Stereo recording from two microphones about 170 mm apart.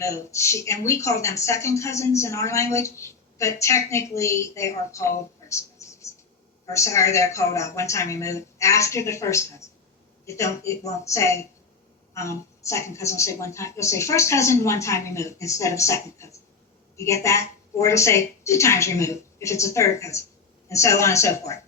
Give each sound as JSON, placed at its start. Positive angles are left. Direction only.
{"t": 0.0, "sound": "speech", "side_deg": 15}